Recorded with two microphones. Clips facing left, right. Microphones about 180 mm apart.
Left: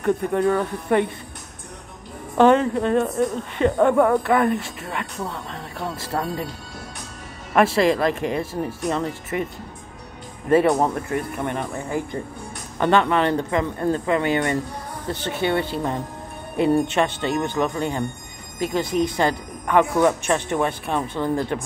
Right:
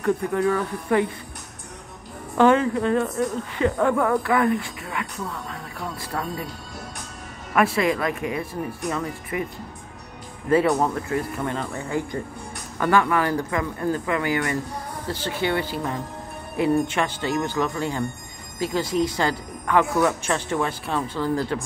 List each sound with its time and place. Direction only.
0.0 s speech: 20° left (ahead or behind)
2.3 s speech: 20° left (ahead or behind)
7.5 s speech: 30° left (ahead or behind)
10.5 s speech: 20° left (ahead or behind)